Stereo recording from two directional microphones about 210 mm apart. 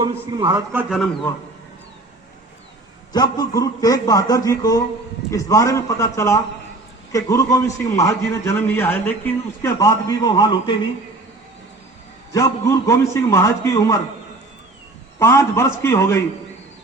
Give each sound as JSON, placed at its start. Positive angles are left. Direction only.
{"t": 0.0, "sound": "a man's voice", "side_deg": -20}
{"t": 3.1, "sound": "a man's voice", "side_deg": 20}
{"t": 12.3, "sound": "a man's voice", "side_deg": 15}
{"t": 15.2, "sound": "a man's voice", "side_deg": 10}